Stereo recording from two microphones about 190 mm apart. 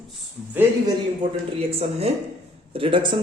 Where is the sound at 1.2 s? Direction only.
25° right (ahead or behind).